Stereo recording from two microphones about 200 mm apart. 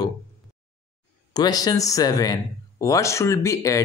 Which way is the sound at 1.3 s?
20° left (ahead or behind).